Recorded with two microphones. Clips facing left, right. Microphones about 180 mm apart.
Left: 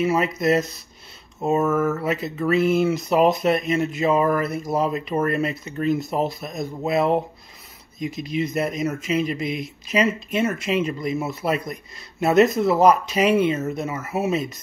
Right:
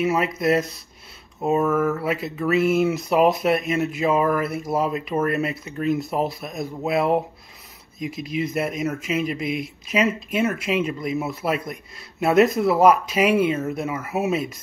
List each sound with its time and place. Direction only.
0.0 s speech: centre (ahead or behind)